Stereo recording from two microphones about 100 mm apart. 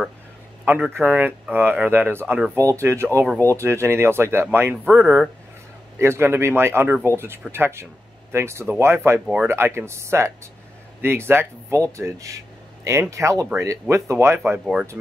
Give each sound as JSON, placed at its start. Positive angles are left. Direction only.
{"t": 0.7, "sound": "speech", "side_deg": -20}
{"t": 9.2, "sound": "speech", "side_deg": -5}
{"t": 9.5, "sound": "speech", "side_deg": -25}
{"t": 14.6, "sound": "speech", "side_deg": -5}